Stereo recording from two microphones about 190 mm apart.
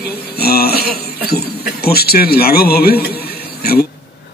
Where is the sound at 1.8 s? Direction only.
55° left (ahead or behind).